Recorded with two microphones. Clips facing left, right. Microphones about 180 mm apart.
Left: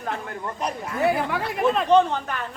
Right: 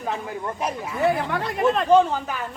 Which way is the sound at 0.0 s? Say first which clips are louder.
Right 2 dB; 5° right (ahead or behind).